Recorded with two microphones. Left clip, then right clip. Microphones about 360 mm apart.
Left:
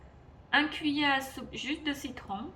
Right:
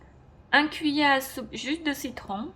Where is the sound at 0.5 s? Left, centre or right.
Centre.